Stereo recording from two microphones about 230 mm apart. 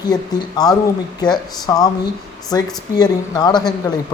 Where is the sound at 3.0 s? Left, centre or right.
Centre.